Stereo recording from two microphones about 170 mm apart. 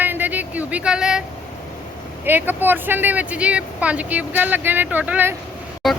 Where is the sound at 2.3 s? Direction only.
10° right (ahead or behind).